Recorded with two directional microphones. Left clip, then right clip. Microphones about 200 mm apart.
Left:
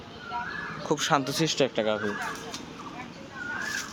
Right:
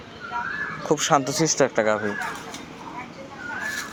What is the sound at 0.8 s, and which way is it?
Speech, 5° right (ahead or behind).